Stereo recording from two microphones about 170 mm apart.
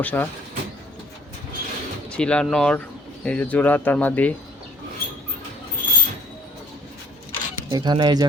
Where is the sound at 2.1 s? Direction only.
5° left (ahead or behind).